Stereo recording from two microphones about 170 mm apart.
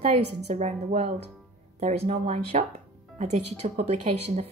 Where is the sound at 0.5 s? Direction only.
40° right (ahead or behind).